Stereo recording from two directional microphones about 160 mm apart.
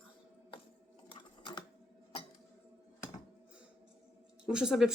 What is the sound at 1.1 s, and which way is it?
Typing, 30° left (ahead or behind).